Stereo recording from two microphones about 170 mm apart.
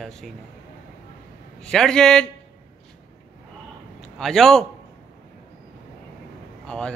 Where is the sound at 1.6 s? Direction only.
5° left (ahead or behind).